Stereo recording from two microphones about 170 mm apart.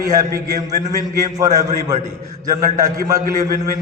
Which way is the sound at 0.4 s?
20° right (ahead or behind).